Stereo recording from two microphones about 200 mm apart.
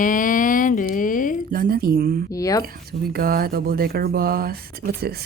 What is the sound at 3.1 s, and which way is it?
Speech, 50° right (ahead or behind).